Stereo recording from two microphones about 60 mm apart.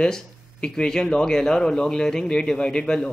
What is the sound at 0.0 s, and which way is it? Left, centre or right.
Speech, centre.